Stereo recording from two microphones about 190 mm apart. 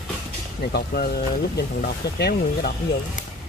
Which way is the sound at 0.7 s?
55° left (ahead or behind).